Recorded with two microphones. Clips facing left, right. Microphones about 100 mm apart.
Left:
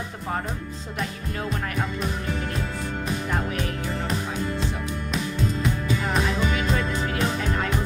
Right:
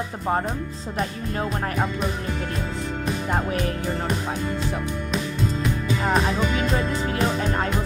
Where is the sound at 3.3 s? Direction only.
35° right (ahead or behind).